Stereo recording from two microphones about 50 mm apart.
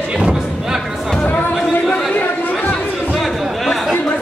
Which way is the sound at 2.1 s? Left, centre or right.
Left.